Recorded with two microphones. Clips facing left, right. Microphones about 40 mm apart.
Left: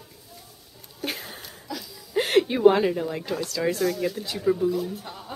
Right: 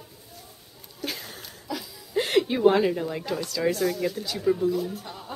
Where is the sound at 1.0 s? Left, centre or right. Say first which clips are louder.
Left 2 dB; centre.